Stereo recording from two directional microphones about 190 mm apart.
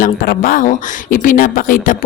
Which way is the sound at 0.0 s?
45° left (ahead or behind).